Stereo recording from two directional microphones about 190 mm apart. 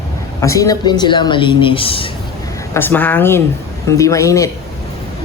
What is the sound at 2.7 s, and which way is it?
Speech, 10° left (ahead or behind).